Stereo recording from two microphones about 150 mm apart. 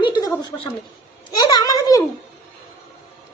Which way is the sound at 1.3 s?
25° left (ahead or behind).